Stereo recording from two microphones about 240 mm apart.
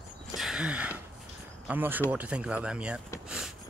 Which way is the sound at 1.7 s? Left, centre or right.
Centre.